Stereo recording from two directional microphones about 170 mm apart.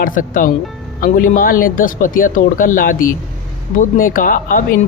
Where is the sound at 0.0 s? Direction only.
50° left (ahead or behind).